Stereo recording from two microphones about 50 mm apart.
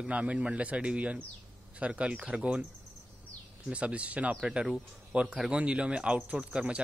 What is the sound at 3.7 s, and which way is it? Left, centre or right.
Speech, right.